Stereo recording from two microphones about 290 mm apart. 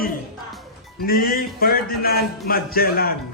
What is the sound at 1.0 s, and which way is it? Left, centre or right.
Music, left.